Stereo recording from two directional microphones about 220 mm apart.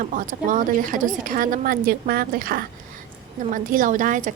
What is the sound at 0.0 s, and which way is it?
A woman's voice, 35° right (ahead or behind).